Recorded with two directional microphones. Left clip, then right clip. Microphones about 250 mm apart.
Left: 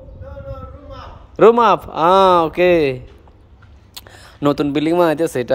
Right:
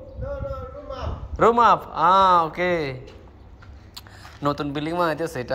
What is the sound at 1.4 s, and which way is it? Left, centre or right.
Speech, left.